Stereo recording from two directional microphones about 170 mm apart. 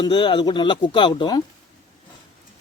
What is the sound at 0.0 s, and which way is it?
Speech, 25° left (ahead or behind).